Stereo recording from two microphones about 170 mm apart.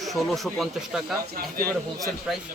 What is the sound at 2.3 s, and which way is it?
Speech, centre (ahead or behind).